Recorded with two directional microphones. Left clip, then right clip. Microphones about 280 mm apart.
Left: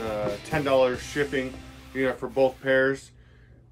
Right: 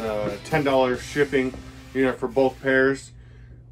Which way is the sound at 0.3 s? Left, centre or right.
Centre.